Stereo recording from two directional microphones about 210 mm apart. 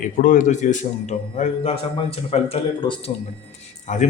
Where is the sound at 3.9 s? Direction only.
35° left (ahead or behind).